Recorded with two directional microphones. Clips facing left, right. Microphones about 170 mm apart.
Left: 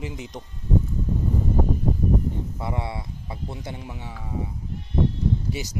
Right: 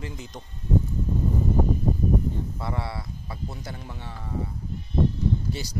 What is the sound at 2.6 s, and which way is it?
Speech, 20° left (ahead or behind).